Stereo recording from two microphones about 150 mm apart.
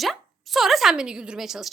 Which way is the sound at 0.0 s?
Centre (ahead or behind).